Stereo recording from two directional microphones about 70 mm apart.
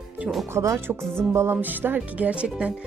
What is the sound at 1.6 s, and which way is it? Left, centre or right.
Speech, right.